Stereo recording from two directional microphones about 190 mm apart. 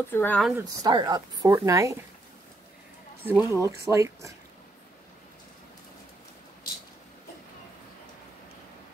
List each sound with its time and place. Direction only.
0.1 s speech: 10° left (ahead or behind)
0.4 s speech: 5° right (ahead or behind)
0.8 s a woman's voice: 20° right (ahead or behind)
3.3 s speech: 15° right (ahead or behind)